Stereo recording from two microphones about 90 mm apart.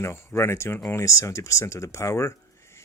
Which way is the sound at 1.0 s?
35° left (ahead or behind).